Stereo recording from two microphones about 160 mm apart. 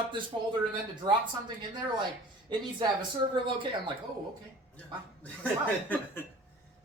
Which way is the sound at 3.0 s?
30° right (ahead or behind).